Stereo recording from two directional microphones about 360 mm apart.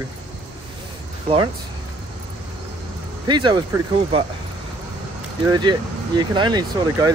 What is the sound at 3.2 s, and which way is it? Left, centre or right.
Speech, centre.